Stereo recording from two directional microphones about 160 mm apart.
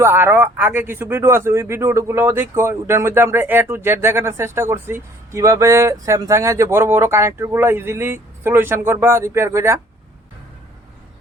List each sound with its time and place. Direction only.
0.0 s speech: 15° right (ahead or behind)